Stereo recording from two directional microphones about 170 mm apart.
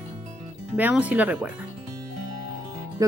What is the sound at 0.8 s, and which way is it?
Speech, 10° right (ahead or behind).